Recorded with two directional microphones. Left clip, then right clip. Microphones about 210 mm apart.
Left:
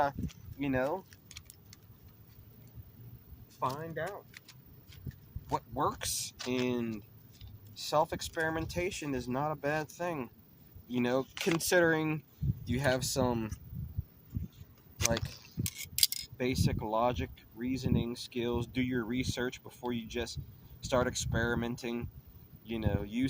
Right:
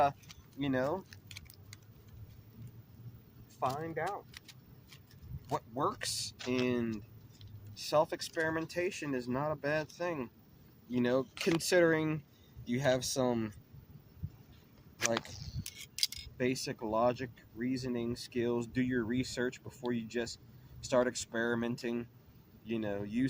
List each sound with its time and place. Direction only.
0.6 s speech: 15° left (ahead or behind)
3.6 s speech: 10° left (ahead or behind)
5.5 s speech: 15° left (ahead or behind)
15.6 s a sound: 45° left (ahead or behind)
16.4 s speech: 15° left (ahead or behind)